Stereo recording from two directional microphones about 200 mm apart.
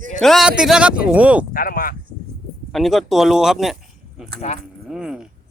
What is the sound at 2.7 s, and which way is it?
Speech, centre (ahead or behind).